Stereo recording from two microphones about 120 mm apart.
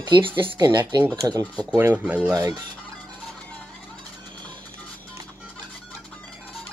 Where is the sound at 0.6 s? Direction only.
35° right (ahead or behind).